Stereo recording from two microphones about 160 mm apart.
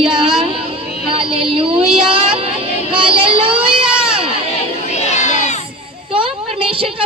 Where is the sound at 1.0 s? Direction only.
35° right (ahead or behind).